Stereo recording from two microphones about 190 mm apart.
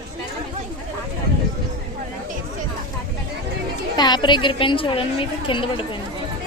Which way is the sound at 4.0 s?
20° left (ahead or behind).